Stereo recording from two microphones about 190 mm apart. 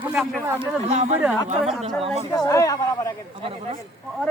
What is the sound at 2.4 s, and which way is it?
Speech, 15° left (ahead or behind).